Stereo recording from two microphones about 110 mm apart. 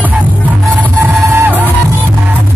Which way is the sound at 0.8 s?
20° right (ahead or behind).